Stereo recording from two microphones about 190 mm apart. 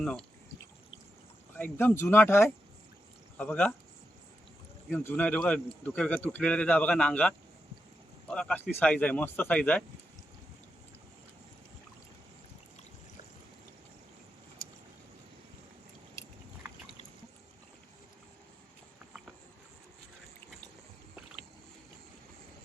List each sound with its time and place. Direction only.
0.0 s speech: 5° left (ahead or behind)
1.5 s speech: 10° left (ahead or behind)
4.9 s speech: 10° left (ahead or behind)
14.6 s a sound: 50° left (ahead or behind)